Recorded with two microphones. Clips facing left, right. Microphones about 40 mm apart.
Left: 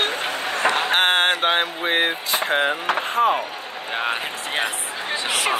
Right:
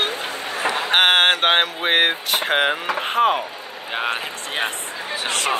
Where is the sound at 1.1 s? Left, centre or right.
Right.